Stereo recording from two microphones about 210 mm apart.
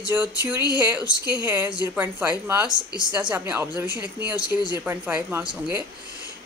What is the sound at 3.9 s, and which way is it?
Speech, 20° left (ahead or behind).